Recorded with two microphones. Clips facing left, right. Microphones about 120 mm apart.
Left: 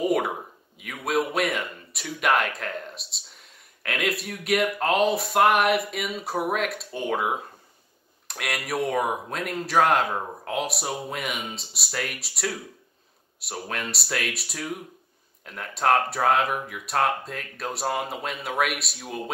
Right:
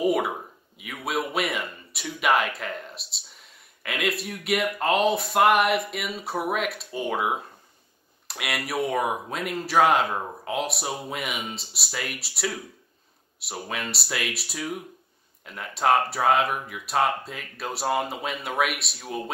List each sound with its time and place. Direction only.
0.0 s speech: centre (ahead or behind)